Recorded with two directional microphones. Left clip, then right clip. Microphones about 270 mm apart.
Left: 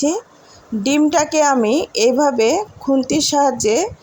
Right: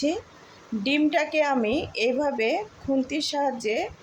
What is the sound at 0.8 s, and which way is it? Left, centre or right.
A woman's voice, left.